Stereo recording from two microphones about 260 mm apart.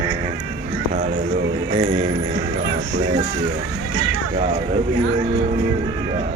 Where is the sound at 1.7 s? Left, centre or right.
Centre.